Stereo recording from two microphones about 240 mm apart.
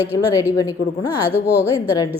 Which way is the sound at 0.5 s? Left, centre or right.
Centre.